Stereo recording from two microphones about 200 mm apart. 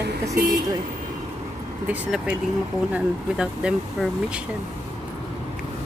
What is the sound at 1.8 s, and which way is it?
Speech, 5° right (ahead or behind).